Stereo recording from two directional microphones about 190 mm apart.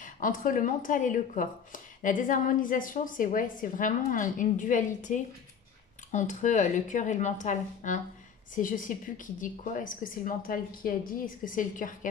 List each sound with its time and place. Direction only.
0.0 s speech: 45° left (ahead or behind)